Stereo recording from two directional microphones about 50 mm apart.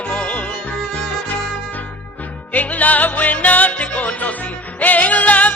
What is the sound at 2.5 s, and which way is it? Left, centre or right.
Music, left.